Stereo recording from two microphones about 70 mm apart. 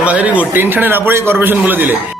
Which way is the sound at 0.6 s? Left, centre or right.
Right.